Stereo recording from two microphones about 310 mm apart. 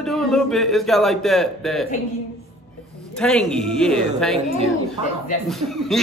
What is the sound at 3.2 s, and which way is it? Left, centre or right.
Speech, centre.